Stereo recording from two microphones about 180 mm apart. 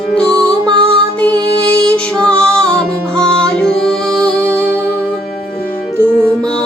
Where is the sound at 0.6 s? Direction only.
25° right (ahead or behind).